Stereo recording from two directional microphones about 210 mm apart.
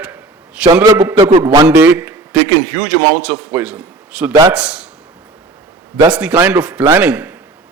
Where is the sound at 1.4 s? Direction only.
10° right (ahead or behind).